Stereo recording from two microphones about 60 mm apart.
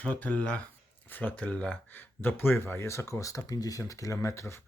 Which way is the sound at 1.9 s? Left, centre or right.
Left.